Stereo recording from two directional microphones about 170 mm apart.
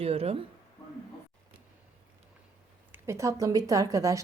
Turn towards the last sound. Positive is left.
turn(degrees=-20)  # may be behind; listen again after turning